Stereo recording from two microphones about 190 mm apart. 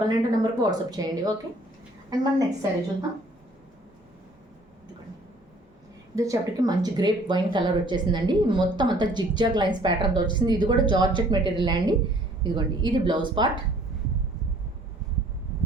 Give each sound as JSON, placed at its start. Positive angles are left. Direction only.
{"t": 0.3, "sound": "speech", "side_deg": -20}
{"t": 6.1, "sound": "speech", "side_deg": -20}